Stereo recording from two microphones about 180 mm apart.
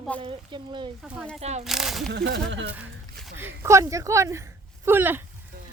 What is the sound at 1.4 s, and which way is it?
Speech, 35° right (ahead or behind).